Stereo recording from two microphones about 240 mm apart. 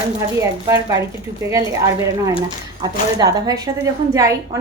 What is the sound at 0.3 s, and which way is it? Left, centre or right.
A woman's voice, centre.